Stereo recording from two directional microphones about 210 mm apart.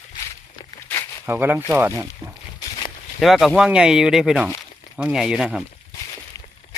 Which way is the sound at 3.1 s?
Centre (ahead or behind).